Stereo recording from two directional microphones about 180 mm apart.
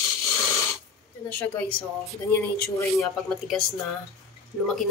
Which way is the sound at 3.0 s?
Centre (ahead or behind).